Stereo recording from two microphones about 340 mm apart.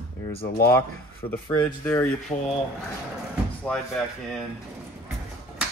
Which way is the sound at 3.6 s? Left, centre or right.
Centre.